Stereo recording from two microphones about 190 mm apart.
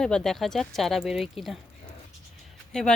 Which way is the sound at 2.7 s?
5° left (ahead or behind).